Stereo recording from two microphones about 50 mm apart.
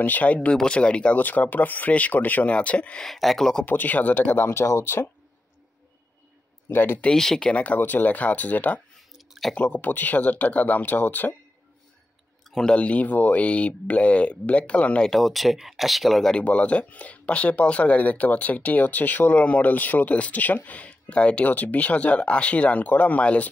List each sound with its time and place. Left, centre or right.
0.0 s speech: left
1.1 s speech: left
3.0 s speech: centre
3.6 s speech: left
6.7 s speech: left
7.2 s speech: centre
7.4 s speech: left
12.6 s speech: left
15.0 s speech: centre
16.4 s speech: left
21.5 s speech: left